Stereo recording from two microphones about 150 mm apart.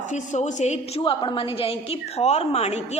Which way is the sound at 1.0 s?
35° left (ahead or behind).